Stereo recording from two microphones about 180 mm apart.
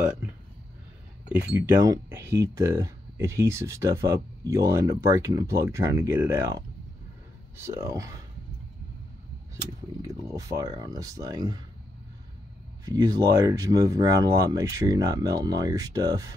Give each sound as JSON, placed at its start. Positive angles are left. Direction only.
{"t": 1.3, "sound": "speech", "side_deg": -10}
{"t": 10.0, "sound": "speech", "side_deg": -20}
{"t": 12.8, "sound": "speech", "side_deg": -20}